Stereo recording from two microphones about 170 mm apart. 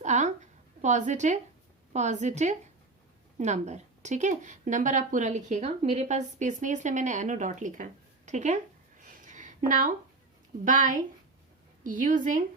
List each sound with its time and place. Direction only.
0.0 s a woman's voice: 45° right (ahead or behind)